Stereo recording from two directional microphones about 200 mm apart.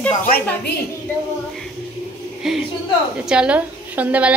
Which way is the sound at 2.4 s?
Centre (ahead or behind).